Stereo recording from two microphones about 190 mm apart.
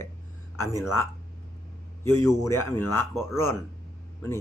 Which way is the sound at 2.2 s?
10° left (ahead or behind).